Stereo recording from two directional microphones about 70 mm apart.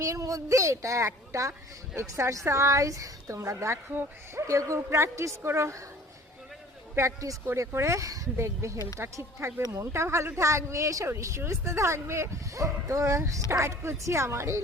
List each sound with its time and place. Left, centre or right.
0.0 s a woman's voice: right
6.9 s a woman's voice: right